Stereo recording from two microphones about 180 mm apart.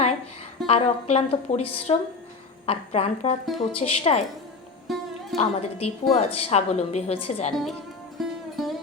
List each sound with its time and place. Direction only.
0.7 s a woman's voice: 35° left (ahead or behind)
4.9 s music: centre (ahead or behind)
5.4 s a woman's voice: 35° left (ahead or behind)
7.5 s speech: centre (ahead or behind)
8.2 s music: centre (ahead or behind)